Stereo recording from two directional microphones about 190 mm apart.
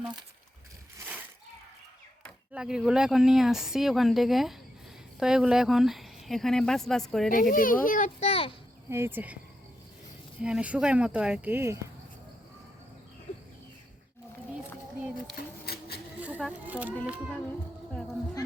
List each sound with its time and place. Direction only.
0.9 s splash: 10° right (ahead or behind)
2.5 s speech: 5° right (ahead or behind)
7.3 s a child's voice: 45° left (ahead or behind); by 8.5 s 30° left (ahead or behind)
8.9 s speech: 10° right (ahead or behind)
10.4 s speech: 5° right (ahead or behind)
15.4 s a sound: 55° left (ahead or behind)
16.2 s speech: 5° right (ahead or behind)